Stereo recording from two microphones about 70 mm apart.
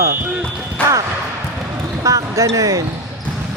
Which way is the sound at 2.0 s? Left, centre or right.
Right.